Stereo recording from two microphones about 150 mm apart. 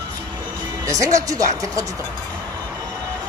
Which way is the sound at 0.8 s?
20° right (ahead or behind).